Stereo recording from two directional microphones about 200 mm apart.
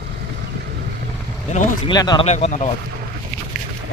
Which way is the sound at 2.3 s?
35° left (ahead or behind).